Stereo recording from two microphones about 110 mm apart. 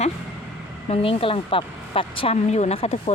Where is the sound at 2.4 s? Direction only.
90° left; by 3.1 s 65° left (ahead or behind).